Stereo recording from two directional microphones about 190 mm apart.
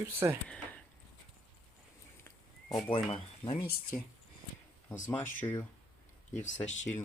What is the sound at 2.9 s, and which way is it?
Speech, 30° left (ahead or behind).